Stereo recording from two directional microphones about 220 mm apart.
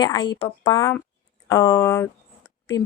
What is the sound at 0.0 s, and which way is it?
A woman's voice, 20° left (ahead or behind).